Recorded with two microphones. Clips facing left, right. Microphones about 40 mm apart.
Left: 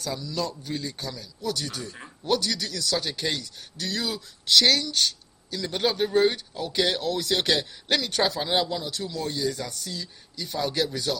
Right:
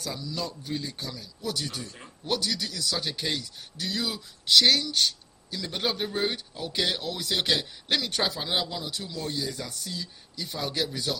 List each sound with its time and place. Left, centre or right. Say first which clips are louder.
0.0 s speech: left 4 dB; centre
1.4 s speech: left 2 dB; right
1.8 s speech: left 3 dB; left
2.2 s speech: left 3 dB; centre
5.6 s speech: left 5 dB; centre
6.9 s speech: left 4 dB; centre
8.4 s speech: left 4 dB; centre
8.9 s speech: left 3 dB; centre